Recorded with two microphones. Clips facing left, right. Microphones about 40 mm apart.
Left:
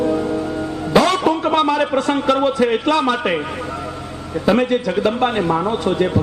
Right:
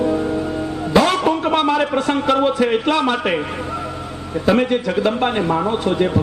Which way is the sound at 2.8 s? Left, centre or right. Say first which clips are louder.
Left 1 dB; centre.